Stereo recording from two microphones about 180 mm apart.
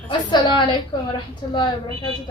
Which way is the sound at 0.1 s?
25° left (ahead or behind).